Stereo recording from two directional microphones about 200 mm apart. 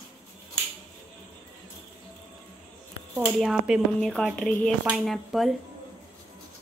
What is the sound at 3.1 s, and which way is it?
Speech, 5° right (ahead or behind).